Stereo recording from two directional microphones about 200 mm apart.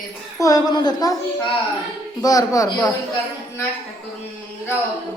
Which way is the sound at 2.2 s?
15° left (ahead or behind).